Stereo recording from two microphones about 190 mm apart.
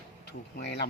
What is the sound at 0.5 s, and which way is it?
Speech, 60° left (ahead or behind).